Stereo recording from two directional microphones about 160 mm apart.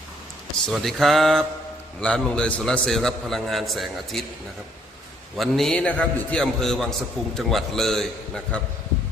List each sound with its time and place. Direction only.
0.7 s a man's voice: centre (ahead or behind)
5.4 s a man's voice: centre (ahead or behind)